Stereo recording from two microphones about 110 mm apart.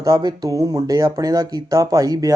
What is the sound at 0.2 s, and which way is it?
Speech, 35° right (ahead or behind).